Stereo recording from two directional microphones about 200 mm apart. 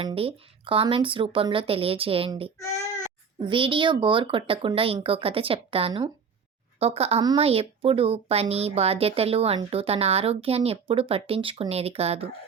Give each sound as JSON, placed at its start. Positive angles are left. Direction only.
{"t": 0.0, "sound": "speech", "side_deg": -30}